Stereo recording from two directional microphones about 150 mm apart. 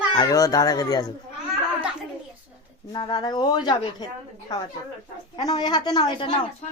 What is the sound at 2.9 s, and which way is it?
Speech, 30° left (ahead or behind).